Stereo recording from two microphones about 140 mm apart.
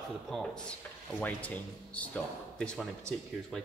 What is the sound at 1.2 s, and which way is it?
Speech, 10° left (ahead or behind).